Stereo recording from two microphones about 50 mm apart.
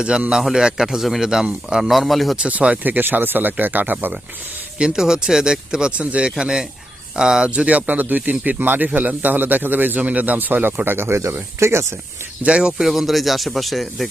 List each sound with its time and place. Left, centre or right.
0.5 s speech: centre
2.5 s speech: right
4.8 s speech: centre
7.5 s speech: right
12.4 s speech: right
12.8 s speech: centre